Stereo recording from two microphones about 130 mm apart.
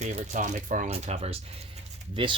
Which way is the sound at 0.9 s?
50° right (ahead or behind).